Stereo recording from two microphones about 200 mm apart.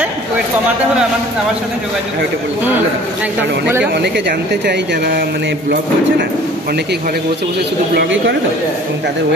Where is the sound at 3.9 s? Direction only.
55° right (ahead or behind).